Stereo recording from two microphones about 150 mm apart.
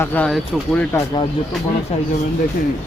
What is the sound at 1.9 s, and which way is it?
Speech, 45° left (ahead or behind).